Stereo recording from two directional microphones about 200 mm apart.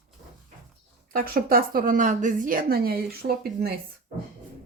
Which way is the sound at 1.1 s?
45° right (ahead or behind).